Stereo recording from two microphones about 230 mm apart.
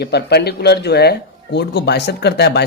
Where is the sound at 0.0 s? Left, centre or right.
Left.